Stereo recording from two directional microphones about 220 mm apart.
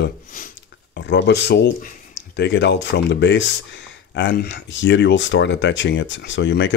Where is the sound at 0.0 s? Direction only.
40° left (ahead or behind).